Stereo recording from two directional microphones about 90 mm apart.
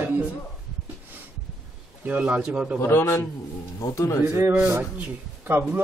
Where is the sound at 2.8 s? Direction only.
30° left (ahead or behind).